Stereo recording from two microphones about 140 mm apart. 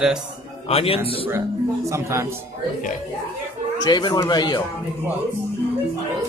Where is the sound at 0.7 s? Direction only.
45° left (ahead or behind).